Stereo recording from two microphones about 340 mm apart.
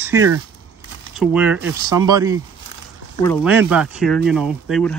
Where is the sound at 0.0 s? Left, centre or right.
Centre.